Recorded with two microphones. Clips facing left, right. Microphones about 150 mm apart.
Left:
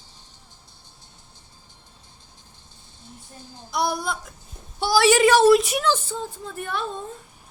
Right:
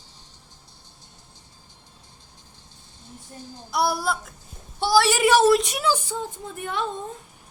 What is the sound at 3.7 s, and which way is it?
A woman's voice, 5° right (ahead or behind).